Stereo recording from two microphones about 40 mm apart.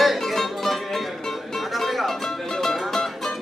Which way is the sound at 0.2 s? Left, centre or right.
Centre.